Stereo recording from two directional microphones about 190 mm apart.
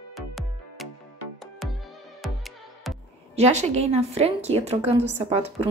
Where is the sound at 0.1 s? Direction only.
Centre (ahead or behind).